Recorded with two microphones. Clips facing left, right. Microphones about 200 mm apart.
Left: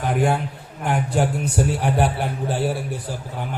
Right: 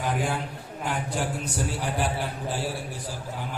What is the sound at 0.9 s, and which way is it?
A man's voice, 60° left (ahead or behind).